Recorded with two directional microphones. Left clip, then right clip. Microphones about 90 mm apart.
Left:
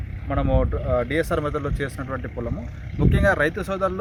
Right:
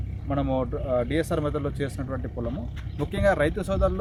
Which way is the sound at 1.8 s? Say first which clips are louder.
Left 3 dB; 10° right (ahead or behind).